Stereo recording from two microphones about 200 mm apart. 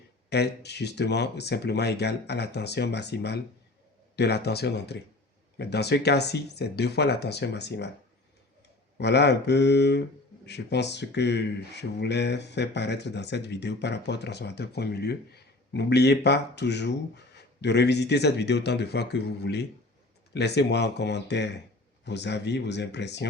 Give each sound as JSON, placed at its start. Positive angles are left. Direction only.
{"t": 0.3, "sound": "speech", "side_deg": 55}
{"t": 9.0, "sound": "speech", "side_deg": 55}